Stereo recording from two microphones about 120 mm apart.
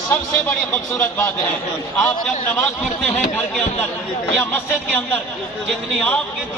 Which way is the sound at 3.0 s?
10° left (ahead or behind).